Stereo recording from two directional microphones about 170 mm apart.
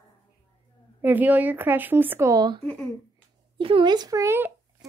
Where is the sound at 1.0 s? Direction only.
10° right (ahead or behind).